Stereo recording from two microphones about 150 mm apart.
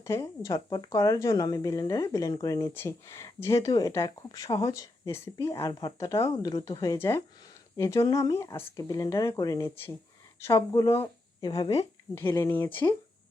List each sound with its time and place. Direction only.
0.0 s speech: 20° left (ahead or behind)
12.1 s speech: 15° left (ahead or behind)